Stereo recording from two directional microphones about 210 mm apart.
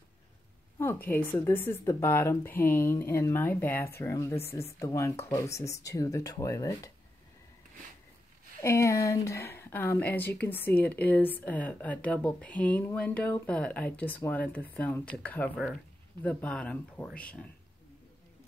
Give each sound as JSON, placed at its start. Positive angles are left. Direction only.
{"t": 0.7, "sound": "speech", "side_deg": 10}
{"t": 8.5, "sound": "speech", "side_deg": 15}